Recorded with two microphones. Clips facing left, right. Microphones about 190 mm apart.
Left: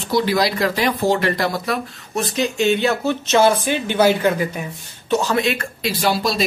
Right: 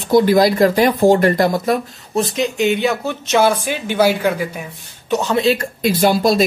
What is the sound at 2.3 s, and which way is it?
Speech, 15° right (ahead or behind).